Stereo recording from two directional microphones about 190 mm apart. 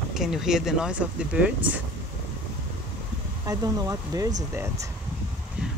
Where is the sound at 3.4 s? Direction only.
20° right (ahead or behind).